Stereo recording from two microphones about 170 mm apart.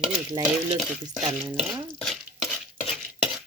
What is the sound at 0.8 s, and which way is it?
Stir, centre (ahead or behind).